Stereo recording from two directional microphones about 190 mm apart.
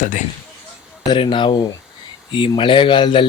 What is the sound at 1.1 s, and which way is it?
Speech, 25° left (ahead or behind).